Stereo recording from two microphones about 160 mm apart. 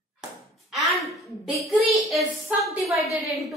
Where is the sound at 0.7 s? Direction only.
Centre (ahead or behind).